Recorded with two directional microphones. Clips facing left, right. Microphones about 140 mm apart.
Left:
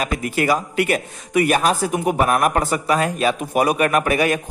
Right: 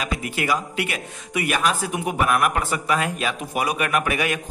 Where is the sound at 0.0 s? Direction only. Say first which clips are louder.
Left 5 dB; 45° left (ahead or behind).